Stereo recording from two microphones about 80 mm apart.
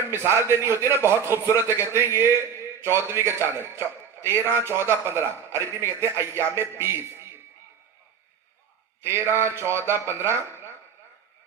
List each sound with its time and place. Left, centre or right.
0.1 s a man's voice: right
9.0 s a man's voice: right